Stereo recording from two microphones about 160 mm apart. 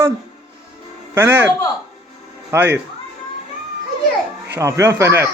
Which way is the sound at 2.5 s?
15° right (ahead or behind).